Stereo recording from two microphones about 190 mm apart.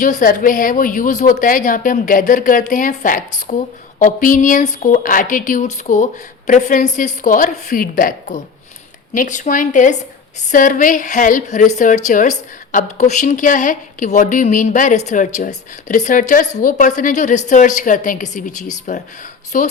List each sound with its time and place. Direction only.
0.0 s a woman's voice: 45° left (ahead or behind)